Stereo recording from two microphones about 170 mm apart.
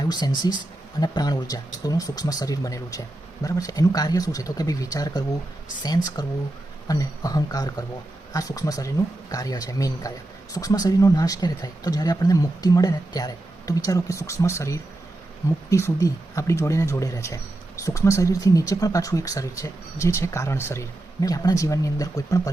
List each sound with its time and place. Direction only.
0.0 s speech: 25° left (ahead or behind)